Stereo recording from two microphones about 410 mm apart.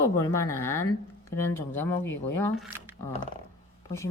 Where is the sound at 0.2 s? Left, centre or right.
Centre.